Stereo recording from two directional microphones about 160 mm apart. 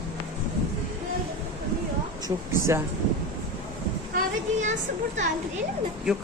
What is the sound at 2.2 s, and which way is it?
Speech, 15° right (ahead or behind).